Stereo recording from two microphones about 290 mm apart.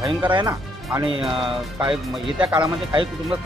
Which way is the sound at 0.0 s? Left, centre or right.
Centre.